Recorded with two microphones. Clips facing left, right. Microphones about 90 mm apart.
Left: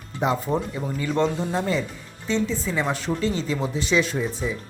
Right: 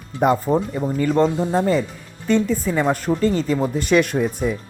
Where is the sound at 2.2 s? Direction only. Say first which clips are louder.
Right 6 dB; 50° right (ahead or behind).